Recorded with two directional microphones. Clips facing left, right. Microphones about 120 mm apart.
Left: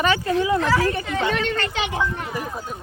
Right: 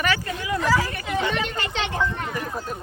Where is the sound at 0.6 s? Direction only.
Centre (ahead or behind).